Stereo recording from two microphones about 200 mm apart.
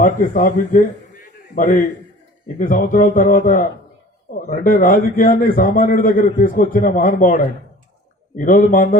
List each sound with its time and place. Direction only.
0.0 s a man's voice: 40° left (ahead or behind)